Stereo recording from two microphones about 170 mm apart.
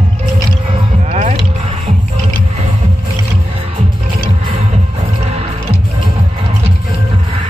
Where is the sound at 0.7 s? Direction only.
40° right (ahead or behind).